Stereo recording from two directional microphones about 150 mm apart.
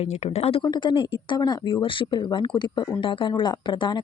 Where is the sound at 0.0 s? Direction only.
40° left (ahead or behind).